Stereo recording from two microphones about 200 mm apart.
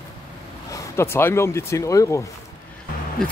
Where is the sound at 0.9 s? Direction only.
10° left (ahead or behind).